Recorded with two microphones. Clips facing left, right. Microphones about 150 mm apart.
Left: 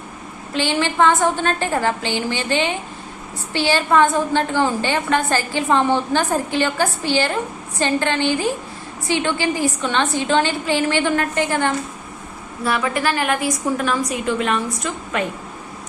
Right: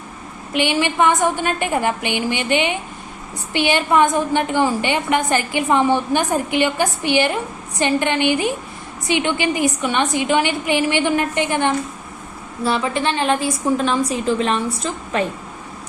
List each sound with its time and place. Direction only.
0.5 s a woman's voice: 15° right (ahead or behind); by 15.2 s 30° right (ahead or behind)